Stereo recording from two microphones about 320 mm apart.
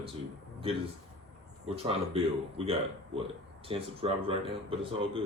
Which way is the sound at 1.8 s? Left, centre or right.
Centre.